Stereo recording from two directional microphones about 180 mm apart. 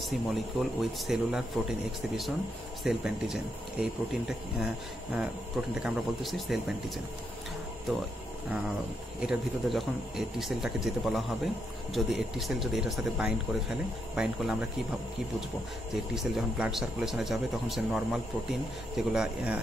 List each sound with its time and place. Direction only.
0.0 s a man's voice: centre (ahead or behind)
5.8 s a man's voice: centre (ahead or behind)
8.5 s a man's voice: 5° right (ahead or behind)
15.9 s a man's voice: centre (ahead or behind)